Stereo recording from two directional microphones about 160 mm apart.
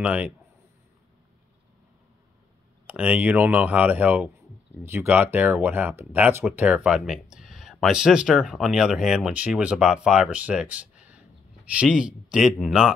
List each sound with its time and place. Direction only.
0.0 s speech: 10° right (ahead or behind)
2.9 s speech: 10° right (ahead or behind)